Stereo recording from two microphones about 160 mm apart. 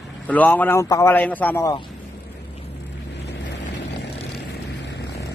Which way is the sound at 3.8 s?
90° left.